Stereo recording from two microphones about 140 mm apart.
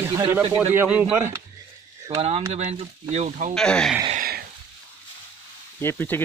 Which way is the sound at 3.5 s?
5° left (ahead or behind).